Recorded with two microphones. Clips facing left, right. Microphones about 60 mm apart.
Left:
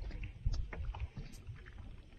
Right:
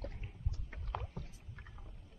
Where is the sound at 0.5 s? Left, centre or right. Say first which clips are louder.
Left 2 dB; left.